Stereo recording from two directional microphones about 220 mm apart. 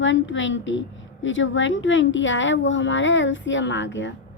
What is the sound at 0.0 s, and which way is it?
A woman's voice, 60° left (ahead or behind).